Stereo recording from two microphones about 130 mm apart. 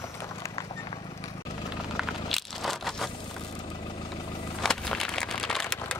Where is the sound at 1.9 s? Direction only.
Centre (ahead or behind).